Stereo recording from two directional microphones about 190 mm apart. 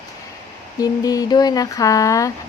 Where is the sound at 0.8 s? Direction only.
20° left (ahead or behind).